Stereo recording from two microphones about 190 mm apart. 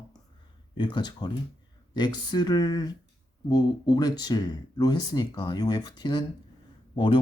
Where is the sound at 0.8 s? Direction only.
25° left (ahead or behind).